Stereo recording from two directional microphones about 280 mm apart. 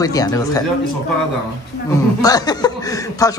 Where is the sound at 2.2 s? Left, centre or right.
Centre.